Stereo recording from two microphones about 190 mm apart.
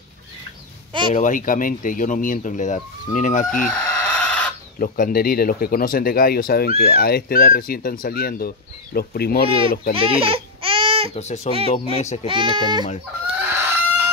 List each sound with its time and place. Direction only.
1.1 s speech: 45° left (ahead or behind)
3.6 s chicken: 5° left (ahead or behind)
4.7 s speech: 45° left (ahead or behind)
9.9 s baby cry: 30° right (ahead or behind)
11.1 s a child's voice: 35° left (ahead or behind)
12.3 s a child's voice: 25° right (ahead or behind)
13.4 s chicken: 10° right (ahead or behind)